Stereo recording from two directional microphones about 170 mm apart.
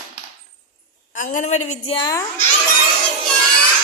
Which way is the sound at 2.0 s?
20° left (ahead or behind).